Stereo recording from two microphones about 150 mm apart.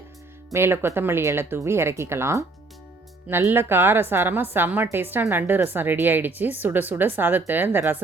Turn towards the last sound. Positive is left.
turn(degrees=-15)  # may be behind; listen again after turning